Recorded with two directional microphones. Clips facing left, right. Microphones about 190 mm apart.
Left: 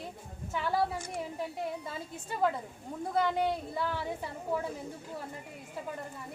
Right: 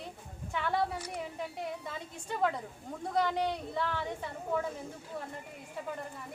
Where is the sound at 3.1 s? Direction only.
5° left (ahead or behind).